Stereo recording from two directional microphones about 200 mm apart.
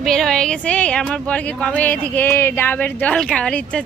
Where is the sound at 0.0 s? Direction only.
Centre (ahead or behind).